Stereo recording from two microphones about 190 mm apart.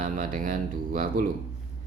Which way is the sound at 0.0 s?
45° right (ahead or behind).